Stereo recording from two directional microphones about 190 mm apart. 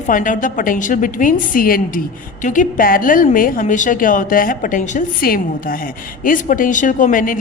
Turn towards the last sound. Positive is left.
turn(degrees=45)  # may be behind; listen again after turning